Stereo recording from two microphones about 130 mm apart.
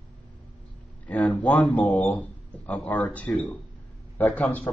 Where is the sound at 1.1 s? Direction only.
10° left (ahead or behind).